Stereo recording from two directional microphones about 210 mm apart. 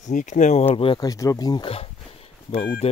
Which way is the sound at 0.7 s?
25° left (ahead or behind).